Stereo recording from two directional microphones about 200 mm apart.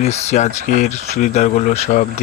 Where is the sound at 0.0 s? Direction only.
35° left (ahead or behind).